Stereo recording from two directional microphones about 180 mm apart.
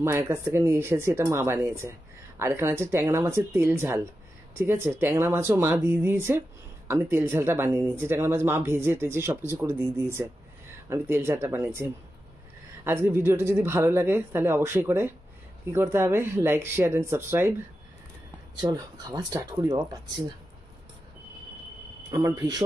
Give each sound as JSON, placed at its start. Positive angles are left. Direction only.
{"t": 0.0, "sound": "speech", "side_deg": -15}
{"t": 18.6, "sound": "speech", "side_deg": -20}
{"t": 22.1, "sound": "speech", "side_deg": -20}